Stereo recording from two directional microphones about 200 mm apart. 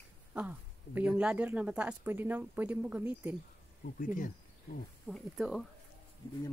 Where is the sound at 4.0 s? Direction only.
40° left (ahead or behind).